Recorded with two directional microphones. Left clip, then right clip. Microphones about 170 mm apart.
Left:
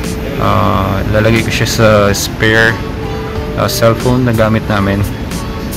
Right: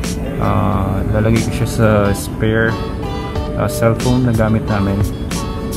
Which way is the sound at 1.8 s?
10° left (ahead or behind).